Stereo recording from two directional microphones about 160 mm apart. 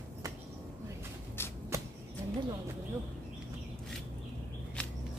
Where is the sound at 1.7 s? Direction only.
20° right (ahead or behind).